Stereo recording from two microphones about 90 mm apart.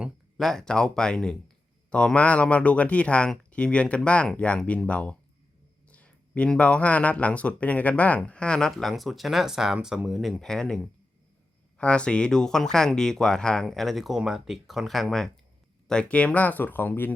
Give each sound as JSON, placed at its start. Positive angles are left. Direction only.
{"t": 0.3, "sound": "speech", "side_deg": 5}